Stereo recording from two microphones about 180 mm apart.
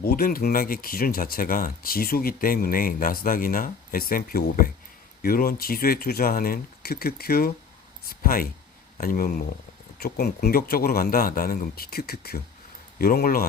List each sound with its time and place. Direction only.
0.0 s speech: 55° left (ahead or behind)